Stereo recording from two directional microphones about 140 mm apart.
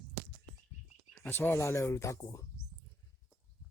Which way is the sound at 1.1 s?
15° left (ahead or behind).